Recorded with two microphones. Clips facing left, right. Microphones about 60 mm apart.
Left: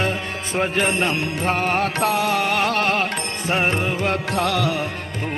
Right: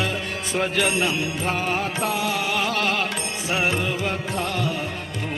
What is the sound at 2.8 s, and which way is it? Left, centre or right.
Music, left.